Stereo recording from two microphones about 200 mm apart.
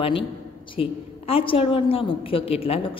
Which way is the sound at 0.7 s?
25° left (ahead or behind).